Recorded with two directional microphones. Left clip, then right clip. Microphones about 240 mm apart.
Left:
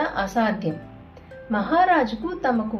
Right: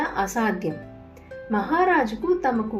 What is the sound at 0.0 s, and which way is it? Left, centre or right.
A woman's voice, right.